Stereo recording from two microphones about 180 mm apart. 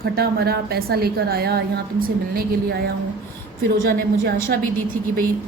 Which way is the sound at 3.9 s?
70° right (ahead or behind).